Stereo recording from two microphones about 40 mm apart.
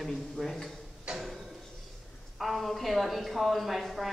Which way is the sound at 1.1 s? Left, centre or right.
Centre.